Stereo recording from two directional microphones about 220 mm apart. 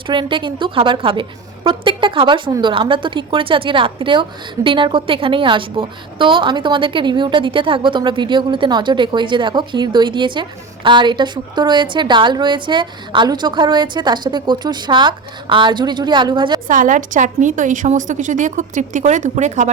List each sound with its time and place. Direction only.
0.1 s a woman's voice: 20° right (ahead or behind)
16.6 s a woman's voice: 35° right (ahead or behind)